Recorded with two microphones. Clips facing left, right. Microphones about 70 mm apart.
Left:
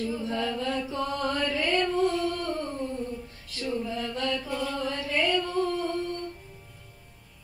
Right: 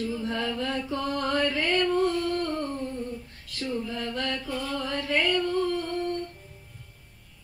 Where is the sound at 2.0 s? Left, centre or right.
Right.